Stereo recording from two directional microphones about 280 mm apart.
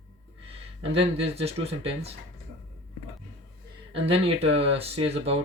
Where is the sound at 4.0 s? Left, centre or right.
Right.